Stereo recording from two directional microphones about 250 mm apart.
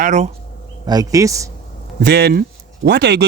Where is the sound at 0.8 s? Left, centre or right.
Centre.